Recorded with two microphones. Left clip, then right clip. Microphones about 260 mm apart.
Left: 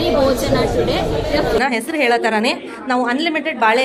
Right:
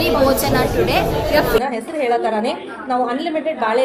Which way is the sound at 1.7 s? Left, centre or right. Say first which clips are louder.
Left 3 dB; left.